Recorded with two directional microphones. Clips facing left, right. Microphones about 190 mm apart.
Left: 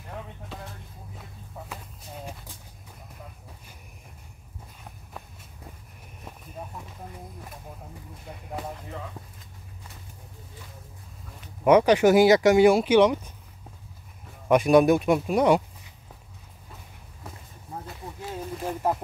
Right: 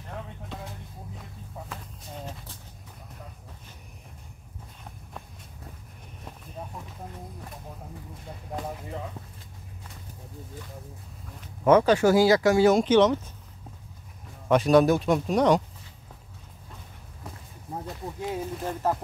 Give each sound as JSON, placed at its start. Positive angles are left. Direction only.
{"t": 1.7, "sound": "horse", "side_deg": 10}
{"t": 11.6, "sound": "speech", "side_deg": 15}
{"t": 14.5, "sound": "speech", "side_deg": 10}
{"t": 18.6, "sound": "speech", "side_deg": 10}